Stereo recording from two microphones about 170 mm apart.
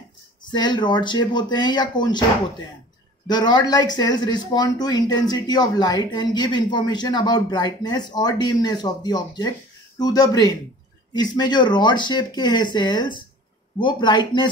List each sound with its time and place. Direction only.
0.5 s speech: 25° left (ahead or behind)
3.3 s speech: 25° left (ahead or behind)